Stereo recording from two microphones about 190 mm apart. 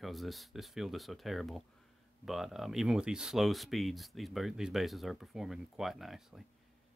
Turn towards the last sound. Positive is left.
turn(degrees=0)  # may be behind; listen again after turning